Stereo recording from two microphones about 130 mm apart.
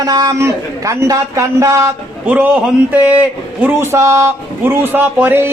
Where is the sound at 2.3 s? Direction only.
10° right (ahead or behind).